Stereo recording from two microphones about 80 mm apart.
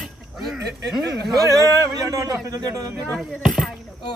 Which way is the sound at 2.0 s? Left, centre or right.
Right.